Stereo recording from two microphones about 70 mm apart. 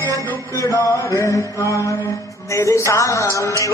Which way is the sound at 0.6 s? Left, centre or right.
Left.